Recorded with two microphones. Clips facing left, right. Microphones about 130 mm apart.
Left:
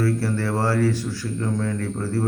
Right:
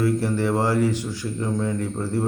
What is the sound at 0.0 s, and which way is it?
Speech, 15° right (ahead or behind).